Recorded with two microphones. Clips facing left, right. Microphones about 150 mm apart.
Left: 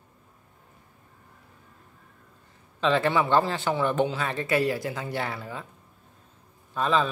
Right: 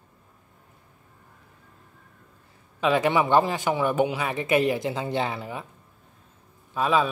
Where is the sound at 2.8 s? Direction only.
15° right (ahead or behind).